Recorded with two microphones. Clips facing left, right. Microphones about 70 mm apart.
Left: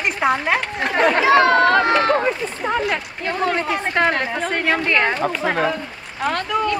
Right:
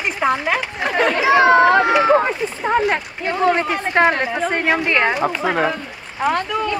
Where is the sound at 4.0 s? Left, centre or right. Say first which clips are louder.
Right 4 dB; right.